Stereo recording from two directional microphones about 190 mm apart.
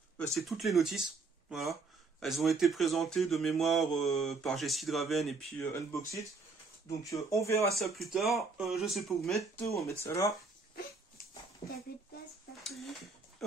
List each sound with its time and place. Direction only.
0.3 s speech: centre (ahead or behind); by 7.6 s 15° left (ahead or behind)
7.7 s speech: centre (ahead or behind)
9.4 s speech: 15° left (ahead or behind)
11.6 s speech: 20° left (ahead or behind)
12.6 s a sound: centre (ahead or behind)